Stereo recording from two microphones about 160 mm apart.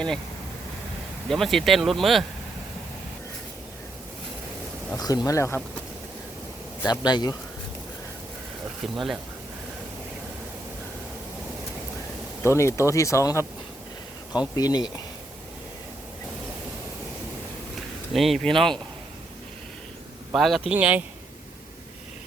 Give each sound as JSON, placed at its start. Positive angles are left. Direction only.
{"t": 1.3, "sound": "speech", "side_deg": 0}
{"t": 4.9, "sound": "speech", "side_deg": 25}
{"t": 6.8, "sound": "speech", "side_deg": 25}
{"t": 8.8, "sound": "speech", "side_deg": 0}
{"t": 12.4, "sound": "speech", "side_deg": 15}
{"t": 14.5, "sound": "speech", "side_deg": 25}
{"t": 18.1, "sound": "speech", "side_deg": 0}
{"t": 20.3, "sound": "speech", "side_deg": 0}